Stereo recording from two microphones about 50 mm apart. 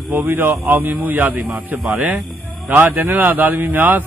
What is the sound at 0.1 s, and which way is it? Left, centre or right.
A man's voice, right.